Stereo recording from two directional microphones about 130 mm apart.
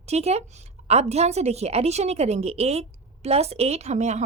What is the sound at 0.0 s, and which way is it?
A woman's voice, 55° right (ahead or behind).